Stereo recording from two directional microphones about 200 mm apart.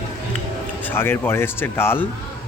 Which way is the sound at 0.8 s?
10° left (ahead or behind).